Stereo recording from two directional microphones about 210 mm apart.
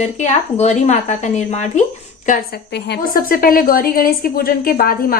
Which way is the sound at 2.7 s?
50° left (ahead or behind).